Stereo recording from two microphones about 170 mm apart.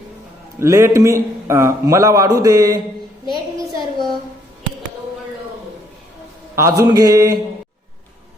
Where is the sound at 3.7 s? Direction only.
20° right (ahead or behind).